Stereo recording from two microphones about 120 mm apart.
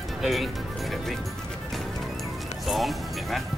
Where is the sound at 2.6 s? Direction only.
Centre (ahead or behind).